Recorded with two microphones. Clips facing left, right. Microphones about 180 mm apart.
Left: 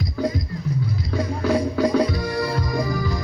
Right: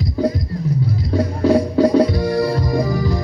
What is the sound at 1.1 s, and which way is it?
Music, 30° right (ahead or behind).